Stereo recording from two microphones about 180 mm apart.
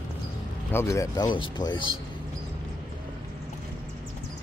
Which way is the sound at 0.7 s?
15° left (ahead or behind).